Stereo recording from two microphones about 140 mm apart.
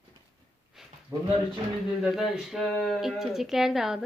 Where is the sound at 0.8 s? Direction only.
5° right (ahead or behind).